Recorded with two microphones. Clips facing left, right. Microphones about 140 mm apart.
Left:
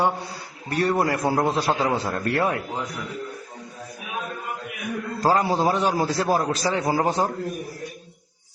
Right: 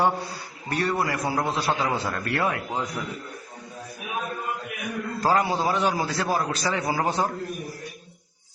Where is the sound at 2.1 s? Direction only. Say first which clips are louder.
Left 4 dB; 35° left (ahead or behind).